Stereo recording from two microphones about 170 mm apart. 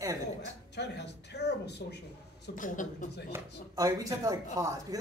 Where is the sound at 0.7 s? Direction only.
80° left.